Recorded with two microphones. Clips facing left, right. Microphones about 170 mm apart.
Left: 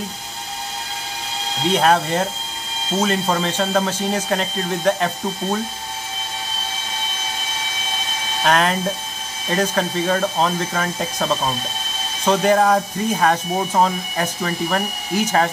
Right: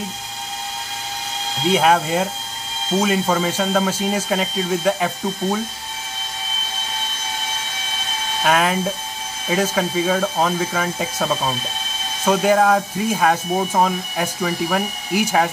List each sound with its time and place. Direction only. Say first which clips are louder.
1.7 s speech: right 1 dB; 5° right (ahead or behind)
8.5 s speech: even; 5° right (ahead or behind)